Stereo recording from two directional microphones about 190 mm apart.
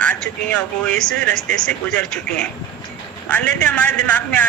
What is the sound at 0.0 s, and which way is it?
A man's voice, 5° left (ahead or behind).